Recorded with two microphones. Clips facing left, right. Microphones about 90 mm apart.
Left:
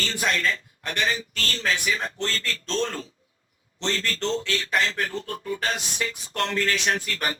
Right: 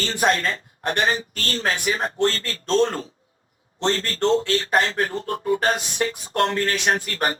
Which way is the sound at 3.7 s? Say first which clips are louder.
Right 5 dB; 40° right (ahead or behind).